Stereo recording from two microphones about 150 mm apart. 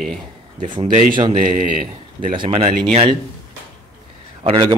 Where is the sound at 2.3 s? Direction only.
35° right (ahead or behind).